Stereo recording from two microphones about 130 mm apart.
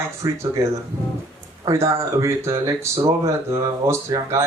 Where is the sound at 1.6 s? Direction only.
25° right (ahead or behind).